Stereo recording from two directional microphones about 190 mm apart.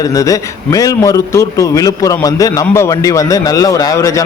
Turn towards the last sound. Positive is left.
turn(degrees=15)  # may be behind; listen again after turning